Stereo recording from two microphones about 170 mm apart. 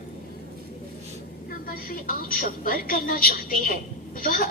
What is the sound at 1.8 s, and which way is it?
Television, 55° left (ahead or behind).